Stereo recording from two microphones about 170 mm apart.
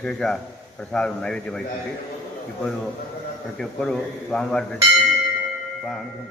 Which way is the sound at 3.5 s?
5° left (ahead or behind).